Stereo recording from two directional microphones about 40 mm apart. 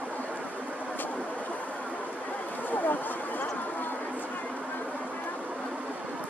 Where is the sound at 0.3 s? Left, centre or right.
Right.